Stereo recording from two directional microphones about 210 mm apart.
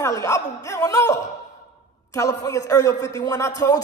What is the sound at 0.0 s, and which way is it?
A man's voice, 15° left (ahead or behind).